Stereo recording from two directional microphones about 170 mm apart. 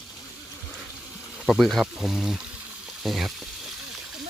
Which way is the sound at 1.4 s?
Centre (ahead or behind).